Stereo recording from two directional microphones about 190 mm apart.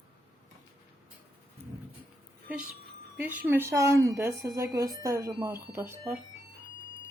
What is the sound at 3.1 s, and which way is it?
A woman's voice, 10° right (ahead or behind).